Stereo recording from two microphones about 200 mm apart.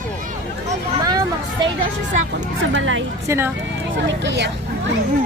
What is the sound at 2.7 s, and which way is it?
Speech, 75° right (ahead or behind).